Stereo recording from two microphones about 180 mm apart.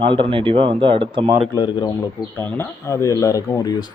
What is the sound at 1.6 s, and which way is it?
Speech, 25° left (ahead or behind).